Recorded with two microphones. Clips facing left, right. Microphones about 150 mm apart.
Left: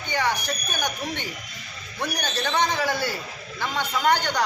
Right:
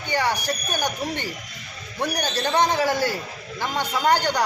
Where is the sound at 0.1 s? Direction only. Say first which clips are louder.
Right 2 dB; 10° right (ahead or behind).